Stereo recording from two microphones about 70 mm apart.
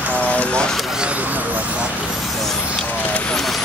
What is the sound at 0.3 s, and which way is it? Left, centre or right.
Vehicle, centre.